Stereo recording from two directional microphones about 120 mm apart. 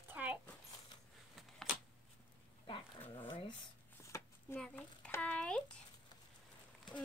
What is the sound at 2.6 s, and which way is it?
Dog, 45° left (ahead or behind).